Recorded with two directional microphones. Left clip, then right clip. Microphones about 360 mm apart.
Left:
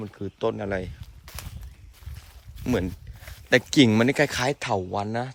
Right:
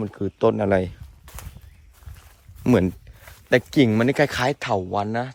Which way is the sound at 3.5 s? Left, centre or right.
Centre.